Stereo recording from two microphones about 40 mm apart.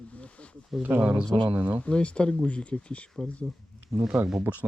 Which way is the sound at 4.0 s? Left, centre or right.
Right.